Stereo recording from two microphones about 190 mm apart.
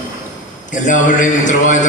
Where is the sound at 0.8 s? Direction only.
40° left (ahead or behind).